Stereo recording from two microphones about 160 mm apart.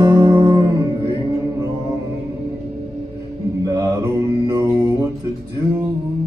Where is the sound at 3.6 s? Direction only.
20° right (ahead or behind).